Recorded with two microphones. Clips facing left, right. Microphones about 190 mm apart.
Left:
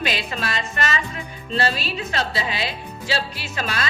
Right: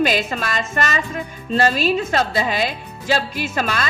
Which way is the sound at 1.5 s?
45° right (ahead or behind).